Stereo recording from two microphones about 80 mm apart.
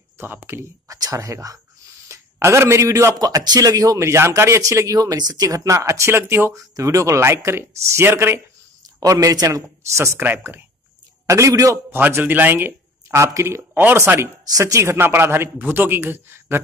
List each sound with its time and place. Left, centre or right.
0.2 s speech: right
0.8 s a man's voice: right
3.2 s a man's voice: right
6.7 s speech: right
9.0 s a man's voice: right
9.9 s speech: right
11.2 s speech: right
11.9 s a man's voice: right